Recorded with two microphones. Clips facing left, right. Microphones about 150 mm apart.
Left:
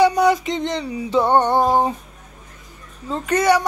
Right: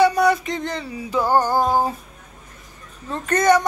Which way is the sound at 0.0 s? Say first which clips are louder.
Left 1 dB; 20° left (ahead or behind).